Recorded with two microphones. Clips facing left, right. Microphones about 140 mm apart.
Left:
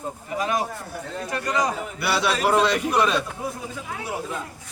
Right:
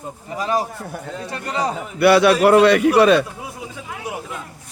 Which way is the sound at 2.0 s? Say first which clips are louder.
Right 11 dB; 60° right (ahead or behind).